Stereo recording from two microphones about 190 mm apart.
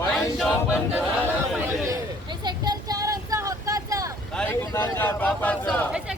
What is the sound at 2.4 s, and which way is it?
Vehicle, 20° right (ahead or behind).